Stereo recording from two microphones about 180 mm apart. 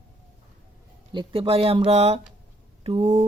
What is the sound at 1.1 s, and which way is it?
Speech, 30° right (ahead or behind).